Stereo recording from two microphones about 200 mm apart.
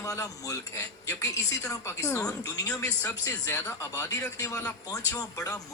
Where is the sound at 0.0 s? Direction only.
15° left (ahead or behind).